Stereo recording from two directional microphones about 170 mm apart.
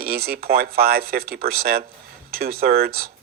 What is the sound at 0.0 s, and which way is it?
Speech, 60° right (ahead or behind).